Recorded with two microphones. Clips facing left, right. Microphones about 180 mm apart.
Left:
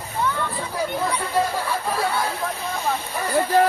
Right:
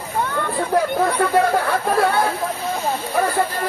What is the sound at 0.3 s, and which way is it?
Speech, 55° right (ahead or behind).